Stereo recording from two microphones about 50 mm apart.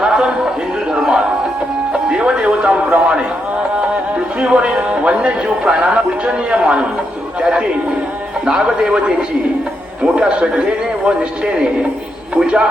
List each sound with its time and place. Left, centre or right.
0.9 s music: centre
4.4 s music: right
8.4 s a man's voice: centre
10.2 s speech: right
12.4 s a man's voice: centre